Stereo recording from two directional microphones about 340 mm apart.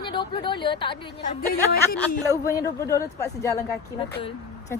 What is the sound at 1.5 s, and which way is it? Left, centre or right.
Speech, left.